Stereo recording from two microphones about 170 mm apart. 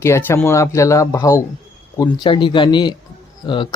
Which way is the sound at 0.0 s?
15° left (ahead or behind).